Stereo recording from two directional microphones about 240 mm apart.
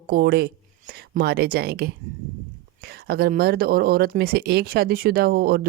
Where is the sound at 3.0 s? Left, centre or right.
Right.